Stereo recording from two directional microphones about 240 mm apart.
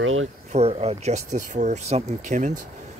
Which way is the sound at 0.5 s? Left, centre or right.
Right.